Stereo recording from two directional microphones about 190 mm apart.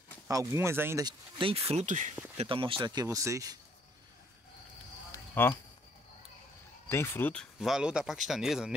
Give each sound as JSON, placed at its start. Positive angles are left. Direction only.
{"t": 0.3, "sound": "speech", "side_deg": -15}
{"t": 2.3, "sound": "speech", "side_deg": -25}
{"t": 5.3, "sound": "speech", "side_deg": 10}
{"t": 6.9, "sound": "speech", "side_deg": 10}
{"t": 7.6, "sound": "speech", "side_deg": -5}